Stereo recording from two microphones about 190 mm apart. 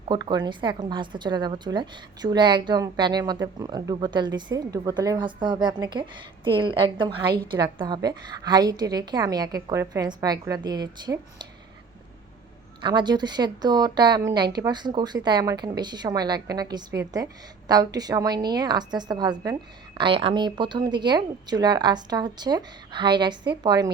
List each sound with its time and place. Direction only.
0.1 s a woman's voice: 20° right (ahead or behind)
12.8 s a woman's voice: 25° right (ahead or behind)